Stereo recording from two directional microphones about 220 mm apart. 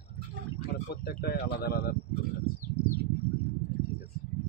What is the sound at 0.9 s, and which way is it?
Speech, 45° left (ahead or behind).